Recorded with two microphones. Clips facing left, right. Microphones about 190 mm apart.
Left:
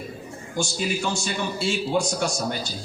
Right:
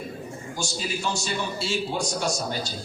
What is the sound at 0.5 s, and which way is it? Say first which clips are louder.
A man's voice: left 5 dB; 55° left (ahead or behind).